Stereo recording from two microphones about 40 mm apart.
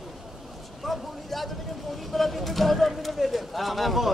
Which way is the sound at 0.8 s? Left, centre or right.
Centre.